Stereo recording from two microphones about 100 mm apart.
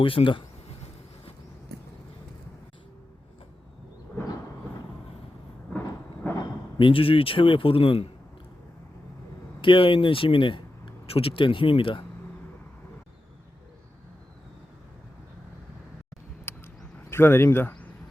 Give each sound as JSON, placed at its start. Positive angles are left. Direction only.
{"t": 0.0, "sound": "speech", "side_deg": 60}
{"t": 6.2, "sound": "a sound", "side_deg": 20}
{"t": 6.7, "sound": "speech", "side_deg": 60}
{"t": 9.6, "sound": "speech", "side_deg": 60}
{"t": 16.5, "sound": "a sound", "side_deg": 25}
{"t": 17.1, "sound": "speech", "side_deg": 25}